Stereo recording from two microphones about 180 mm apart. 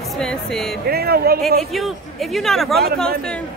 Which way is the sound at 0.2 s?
5° left (ahead or behind).